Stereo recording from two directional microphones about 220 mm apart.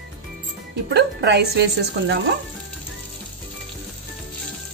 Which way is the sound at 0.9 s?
50° right (ahead or behind).